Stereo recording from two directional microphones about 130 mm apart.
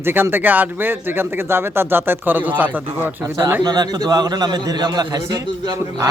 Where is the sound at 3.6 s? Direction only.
30° right (ahead or behind).